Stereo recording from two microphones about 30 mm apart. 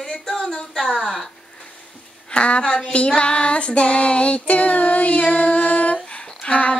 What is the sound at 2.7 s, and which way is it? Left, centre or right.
Music, left.